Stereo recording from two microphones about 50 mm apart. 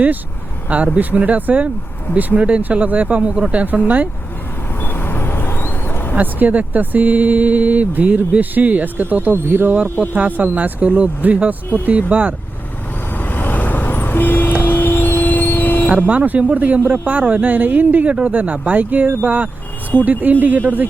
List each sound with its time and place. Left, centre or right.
0.9 s speech: right
4.8 s vehicle: left
6.1 s speech: right
13.1 s vehicle: left
15.9 s speech: right